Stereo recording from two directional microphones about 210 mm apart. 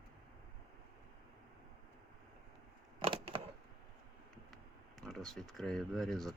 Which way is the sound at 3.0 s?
25° right (ahead or behind).